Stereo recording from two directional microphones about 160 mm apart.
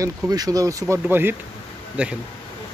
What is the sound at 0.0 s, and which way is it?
Speech, 25° right (ahead or behind).